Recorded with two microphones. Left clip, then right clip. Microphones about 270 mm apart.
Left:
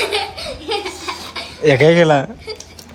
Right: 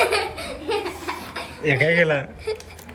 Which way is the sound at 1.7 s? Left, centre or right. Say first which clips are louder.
Left 7 dB; left.